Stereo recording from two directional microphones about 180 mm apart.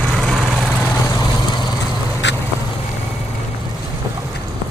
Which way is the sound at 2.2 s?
80° left.